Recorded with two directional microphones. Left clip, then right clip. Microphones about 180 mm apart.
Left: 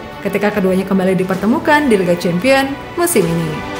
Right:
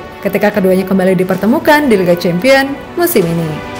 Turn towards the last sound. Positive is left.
turn(degrees=-15)  # may be behind; listen again after turning